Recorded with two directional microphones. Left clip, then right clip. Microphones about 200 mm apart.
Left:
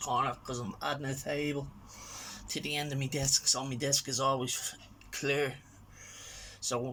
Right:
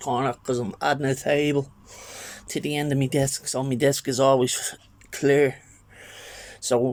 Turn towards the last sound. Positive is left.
turn(degrees=-45)  # may be behind; listen again after turning